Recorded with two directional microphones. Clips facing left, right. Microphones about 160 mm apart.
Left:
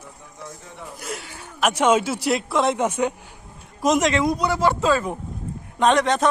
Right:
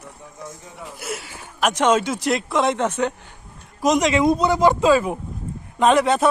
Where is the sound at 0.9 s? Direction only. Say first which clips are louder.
Right 2 dB; 5° right (ahead or behind).